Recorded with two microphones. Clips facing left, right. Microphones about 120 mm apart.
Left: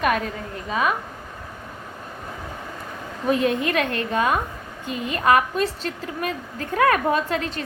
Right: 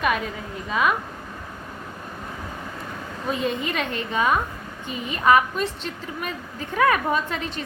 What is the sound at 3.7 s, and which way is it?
Speech, 50° left (ahead or behind).